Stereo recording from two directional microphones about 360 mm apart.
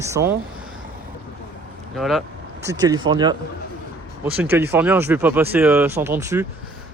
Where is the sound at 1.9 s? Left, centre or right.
Centre.